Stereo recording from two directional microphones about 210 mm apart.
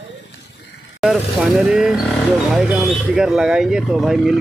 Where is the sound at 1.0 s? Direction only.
Centre (ahead or behind).